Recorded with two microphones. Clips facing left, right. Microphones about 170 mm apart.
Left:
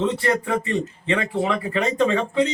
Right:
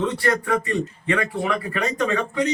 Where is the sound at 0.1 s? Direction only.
25° left (ahead or behind).